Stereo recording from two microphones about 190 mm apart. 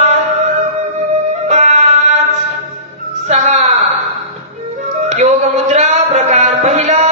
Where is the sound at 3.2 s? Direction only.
35° right (ahead or behind).